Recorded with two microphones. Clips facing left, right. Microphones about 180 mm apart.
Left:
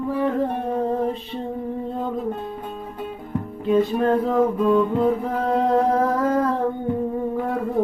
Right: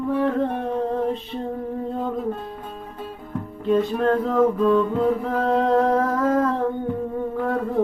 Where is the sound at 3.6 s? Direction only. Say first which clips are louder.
Left 1 dB; 5° left (ahead or behind).